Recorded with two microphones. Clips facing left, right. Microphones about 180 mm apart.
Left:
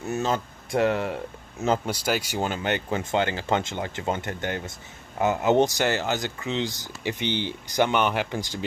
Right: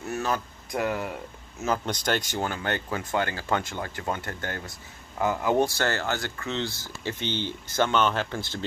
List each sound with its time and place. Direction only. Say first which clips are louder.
0.0 s speech: left 3 dB; 25° left (ahead or behind)
1.9 s speech: left 1 dB; 5° left (ahead or behind)
2.4 s speech: left 3 dB; 20° left (ahead or behind)